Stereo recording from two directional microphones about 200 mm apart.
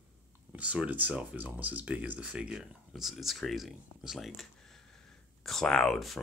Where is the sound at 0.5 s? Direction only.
5° right (ahead or behind).